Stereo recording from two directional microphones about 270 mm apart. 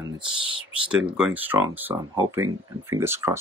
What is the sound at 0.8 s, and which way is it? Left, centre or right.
Speech, centre.